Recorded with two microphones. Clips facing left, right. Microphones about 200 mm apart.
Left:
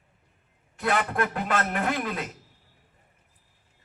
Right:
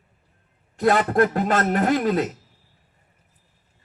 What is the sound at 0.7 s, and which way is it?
A man's voice, 40° right (ahead or behind).